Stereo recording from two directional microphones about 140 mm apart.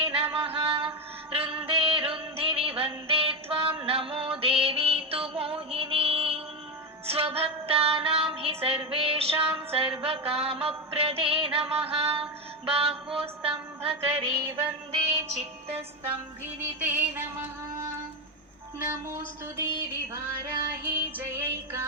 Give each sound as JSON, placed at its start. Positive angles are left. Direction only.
{"t": 0.0, "sound": "music", "side_deg": -40}
{"t": 12.6, "sound": "mantra", "side_deg": -45}
{"t": 13.1, "sound": "music", "side_deg": -40}
{"t": 16.6, "sound": "music", "side_deg": -10}
{"t": 18.8, "sound": "a woman's voice", "side_deg": -20}
{"t": 20.8, "sound": "music", "side_deg": -15}